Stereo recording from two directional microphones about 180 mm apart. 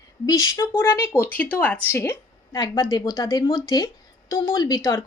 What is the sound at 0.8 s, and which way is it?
A woman's voice, 15° left (ahead or behind).